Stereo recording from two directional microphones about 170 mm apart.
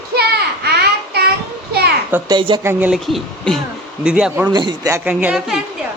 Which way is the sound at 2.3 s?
25° right (ahead or behind).